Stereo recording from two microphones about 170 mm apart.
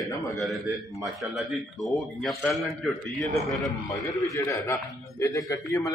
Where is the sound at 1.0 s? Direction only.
Centre (ahead or behind).